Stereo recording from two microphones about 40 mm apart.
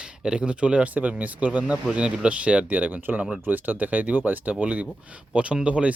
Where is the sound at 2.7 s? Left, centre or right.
Right.